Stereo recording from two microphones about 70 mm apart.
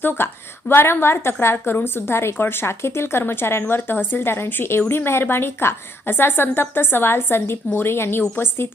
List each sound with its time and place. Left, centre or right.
0.7 s a woman's voice: left